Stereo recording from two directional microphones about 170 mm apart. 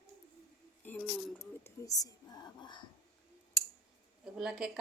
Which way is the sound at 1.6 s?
20° left (ahead or behind).